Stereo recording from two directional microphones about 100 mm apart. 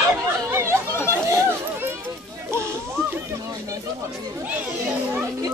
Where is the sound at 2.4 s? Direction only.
25° right (ahead or behind).